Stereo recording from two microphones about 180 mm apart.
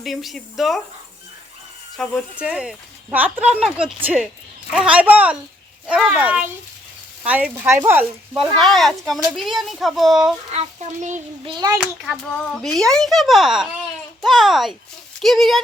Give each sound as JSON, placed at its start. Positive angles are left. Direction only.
{"t": 0.0, "sound": "speech", "side_deg": 0}
{"t": 2.0, "sound": "speech", "side_deg": 0}
{"t": 8.5, "sound": "speech", "side_deg": 0}
{"t": 11.4, "sound": "a child's voice", "side_deg": -20}
{"t": 11.8, "sound": "speech", "side_deg": 0}